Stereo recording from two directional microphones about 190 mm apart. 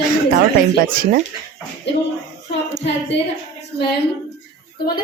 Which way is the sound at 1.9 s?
65° left (ahead or behind).